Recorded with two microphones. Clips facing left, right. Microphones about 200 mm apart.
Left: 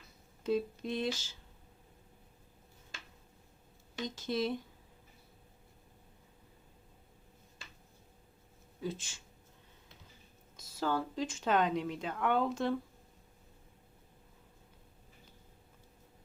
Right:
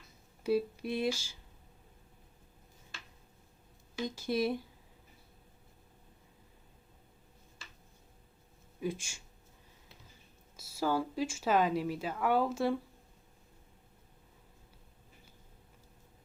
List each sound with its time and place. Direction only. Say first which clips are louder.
0.4 s speech: right 2 dB; 10° right (ahead or behind)
4.0 s speech: right 2 dB; 10° right (ahead or behind)
8.8 s speech: right 3 dB; 10° right (ahead or behind)
10.6 s speech: right 2 dB; 10° right (ahead or behind)